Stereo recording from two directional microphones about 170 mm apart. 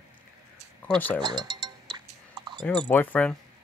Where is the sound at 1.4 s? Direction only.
25° right (ahead or behind).